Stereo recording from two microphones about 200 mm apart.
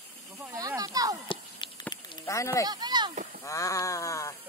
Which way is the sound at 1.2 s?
25° left (ahead or behind).